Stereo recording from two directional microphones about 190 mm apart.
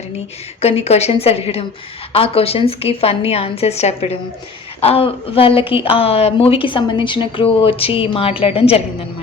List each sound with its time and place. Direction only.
0.6 s a woman's voice: 35° left (ahead or behind)